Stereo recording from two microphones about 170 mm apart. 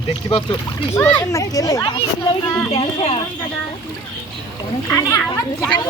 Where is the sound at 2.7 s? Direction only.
35° left (ahead or behind).